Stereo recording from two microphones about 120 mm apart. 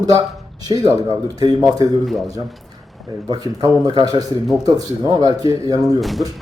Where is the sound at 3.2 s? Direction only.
30° right (ahead or behind).